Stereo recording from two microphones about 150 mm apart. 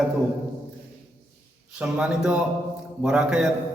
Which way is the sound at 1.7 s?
5° right (ahead or behind).